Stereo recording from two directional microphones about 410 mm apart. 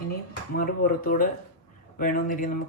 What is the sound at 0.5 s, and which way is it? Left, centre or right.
Speech, left.